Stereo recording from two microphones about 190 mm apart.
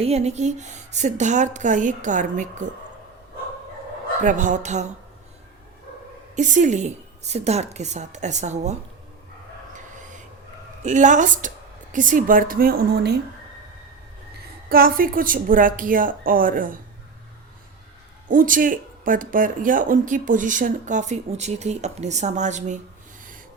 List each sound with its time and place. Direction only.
0.0 s a woman's voice: 35° right (ahead or behind)
4.2 s a woman's voice: 40° right (ahead or behind)
6.3 s a woman's voice: 40° right (ahead or behind)
9.7 s dog: 40° right (ahead or behind)
10.8 s speech: 40° right (ahead or behind); by 13.1 s 55° right (ahead or behind)
14.7 s speech: 50° right (ahead or behind)
18.3 s speech: 45° right (ahead or behind)